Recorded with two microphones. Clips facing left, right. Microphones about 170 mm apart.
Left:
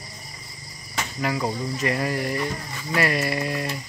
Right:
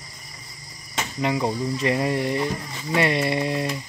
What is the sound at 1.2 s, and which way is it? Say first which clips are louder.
Speech: right 3 dB; 20° right (ahead or behind).